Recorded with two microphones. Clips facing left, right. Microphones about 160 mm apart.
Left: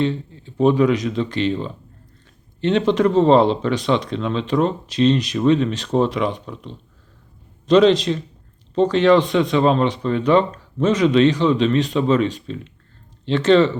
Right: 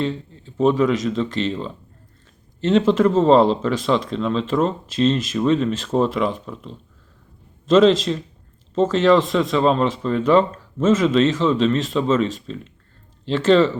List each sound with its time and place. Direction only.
0.0 s speech: centre (ahead or behind)
13.3 s speech: 5° right (ahead or behind)